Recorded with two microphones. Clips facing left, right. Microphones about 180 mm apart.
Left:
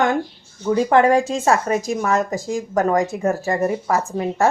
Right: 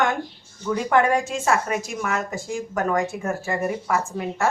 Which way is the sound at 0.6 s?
30° left (ahead or behind).